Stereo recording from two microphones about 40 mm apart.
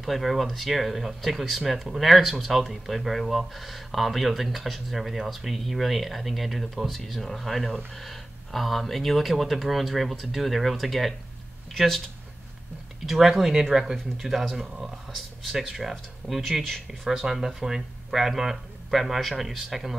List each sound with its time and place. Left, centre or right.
0.0 s speech: centre
13.0 s speech: centre
16.6 s speech: centre
17.1 s speech: centre